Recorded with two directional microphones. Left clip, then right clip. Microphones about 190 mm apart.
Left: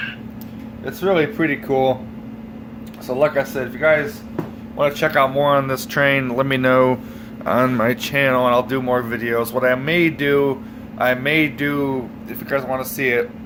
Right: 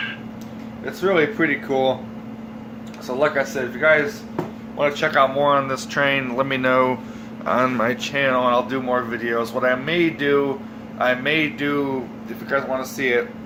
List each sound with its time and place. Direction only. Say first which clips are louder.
1.0 s speech: left 1 dB; 30° left (ahead or behind)
3.2 s speech: left 2 dB; 35° left (ahead or behind)
8.0 s speech: left 3 dB; 35° left (ahead or behind)